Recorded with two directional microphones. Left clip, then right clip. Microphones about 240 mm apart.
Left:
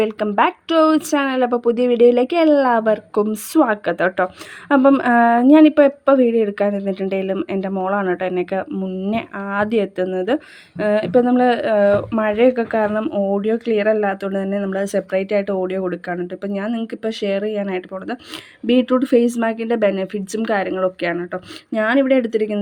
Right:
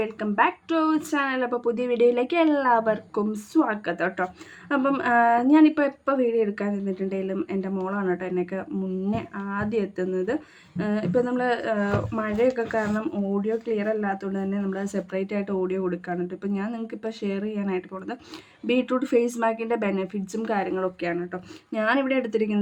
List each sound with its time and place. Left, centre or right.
0.0 s a woman's voice: left